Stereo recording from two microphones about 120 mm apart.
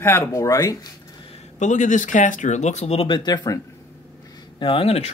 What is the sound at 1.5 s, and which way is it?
Speech, 90° left.